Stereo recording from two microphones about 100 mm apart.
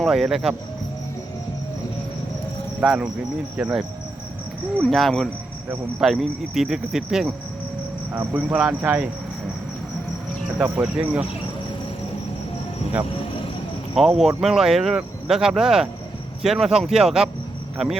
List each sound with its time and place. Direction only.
0.0 s speech: 5° right (ahead or behind)
2.8 s speech: 5° right (ahead or behind)
8.1 s speech: 15° right (ahead or behind)
11.0 s speech: 15° right (ahead or behind)
13.9 s speech: 5° right (ahead or behind)